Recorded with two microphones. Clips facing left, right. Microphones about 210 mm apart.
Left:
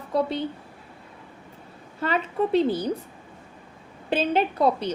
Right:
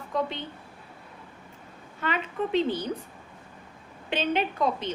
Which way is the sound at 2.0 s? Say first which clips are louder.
Left 5 dB; 35° left (ahead or behind).